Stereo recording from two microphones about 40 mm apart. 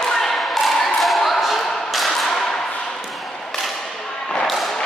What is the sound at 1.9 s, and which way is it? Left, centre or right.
Thump, centre.